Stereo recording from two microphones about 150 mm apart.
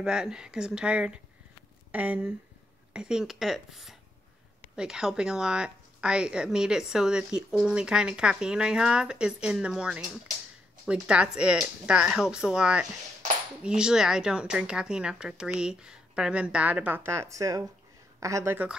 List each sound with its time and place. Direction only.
0.0 s speech: 5° right (ahead or behind)